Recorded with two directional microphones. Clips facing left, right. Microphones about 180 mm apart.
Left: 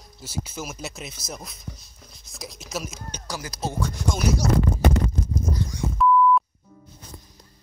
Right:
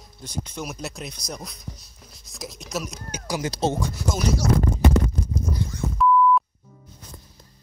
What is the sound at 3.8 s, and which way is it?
Speech, 10° right (ahead or behind).